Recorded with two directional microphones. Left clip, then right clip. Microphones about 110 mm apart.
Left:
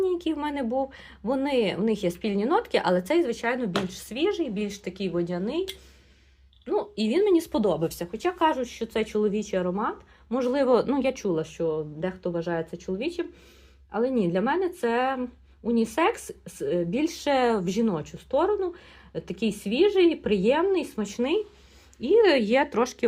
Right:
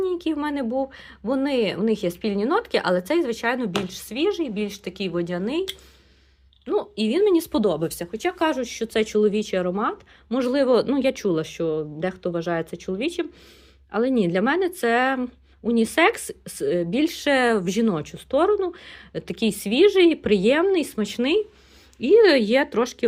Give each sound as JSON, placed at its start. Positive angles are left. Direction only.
{"t": 0.0, "sound": "speech", "side_deg": -35}
{"t": 6.9, "sound": "speech", "side_deg": -30}
{"t": 10.5, "sound": "speech", "side_deg": -25}
{"t": 11.3, "sound": "speech", "side_deg": -55}
{"t": 17.8, "sound": "speech", "side_deg": -65}
{"t": 22.3, "sound": "speech", "side_deg": -30}